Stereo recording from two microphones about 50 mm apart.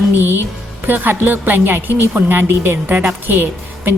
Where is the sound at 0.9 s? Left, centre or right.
Right.